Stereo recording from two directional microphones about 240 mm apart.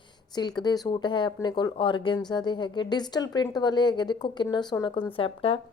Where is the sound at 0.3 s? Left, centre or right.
Centre.